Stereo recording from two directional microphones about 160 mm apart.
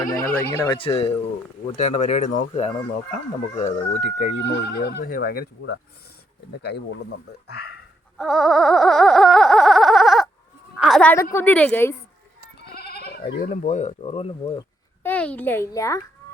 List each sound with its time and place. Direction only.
0.5 s speech: 20° left (ahead or behind)
0.8 s speech: 35° left (ahead or behind)
4.4 s speech: 90° left; by 5.7 s 70° left (ahead or behind)
6.6 s speech: 90° left
8.2 s a sound: centre (ahead or behind)
10.8 s a woman's voice: centre (ahead or behind)
11.1 s a woman's voice: 15° left (ahead or behind)
12.7 s speech: 80° left; by 14.6 s 40° left (ahead or behind)
15.0 s a woman's voice: 10° left (ahead or behind)